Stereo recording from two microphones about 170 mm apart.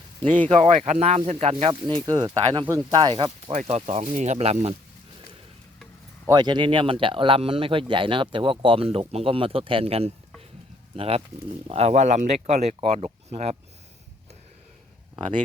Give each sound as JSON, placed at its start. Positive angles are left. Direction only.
{"t": 0.4, "sound": "speech", "side_deg": -35}
{"t": 2.0, "sound": "speech", "side_deg": -25}
{"t": 3.5, "sound": "speech", "side_deg": -40}
{"t": 6.2, "sound": "speech", "side_deg": -25}
{"t": 15.1, "sound": "speech", "side_deg": -25}